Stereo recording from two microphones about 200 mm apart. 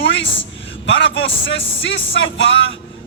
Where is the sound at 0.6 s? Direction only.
65° left (ahead or behind).